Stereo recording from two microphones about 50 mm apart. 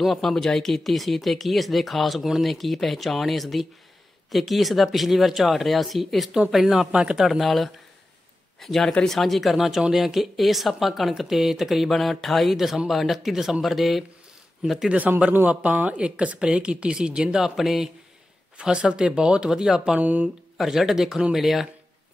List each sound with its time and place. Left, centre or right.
0.0 s speech: centre
6.9 s speech: centre
7.2 s speech: centre
15.6 s speech: right
17.6 s speech: centre
18.6 s speech: centre
20.0 s speech: right
20.5 s speech: centre